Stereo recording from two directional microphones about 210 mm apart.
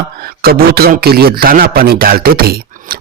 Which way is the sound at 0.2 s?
45° right (ahead or behind).